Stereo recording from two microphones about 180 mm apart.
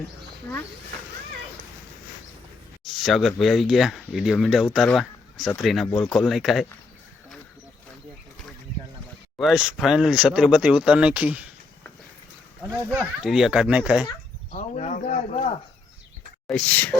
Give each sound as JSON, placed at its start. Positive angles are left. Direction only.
{"t": 2.8, "sound": "speech", "side_deg": 0}
{"t": 9.4, "sound": "speech", "side_deg": -5}
{"t": 12.7, "sound": "speech", "side_deg": -10}
{"t": 14.5, "sound": "speech", "side_deg": 40}
{"t": 16.5, "sound": "speech", "side_deg": 5}